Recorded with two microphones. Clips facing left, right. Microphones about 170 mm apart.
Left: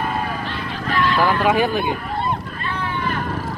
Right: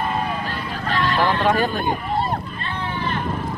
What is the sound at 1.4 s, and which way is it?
Speech, 10° left (ahead or behind).